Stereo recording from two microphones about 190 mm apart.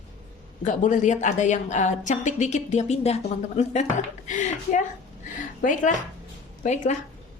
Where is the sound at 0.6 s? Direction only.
40° left (ahead or behind).